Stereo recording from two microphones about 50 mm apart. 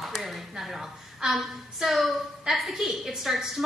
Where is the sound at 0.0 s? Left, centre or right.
Centre.